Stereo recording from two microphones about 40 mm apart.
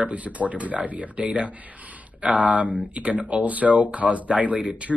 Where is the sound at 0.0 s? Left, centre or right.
Right.